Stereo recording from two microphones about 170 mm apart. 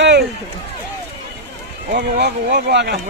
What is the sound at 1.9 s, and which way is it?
Speech, 65° right (ahead or behind).